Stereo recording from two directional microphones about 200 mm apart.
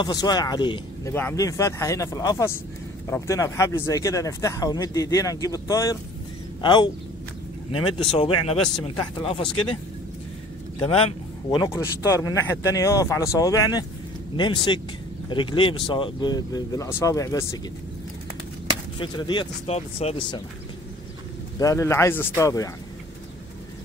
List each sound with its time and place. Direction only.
0.0 s speech: 20° left (ahead or behind)
8.1 s speech: 25° left (ahead or behind)
10.8 s speech: 30° left (ahead or behind)
18.9 s speech: 25° left (ahead or behind)
21.5 s speech: 15° left (ahead or behind)